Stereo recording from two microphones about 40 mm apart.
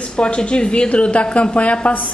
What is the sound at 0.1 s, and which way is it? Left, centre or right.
A woman's voice, left.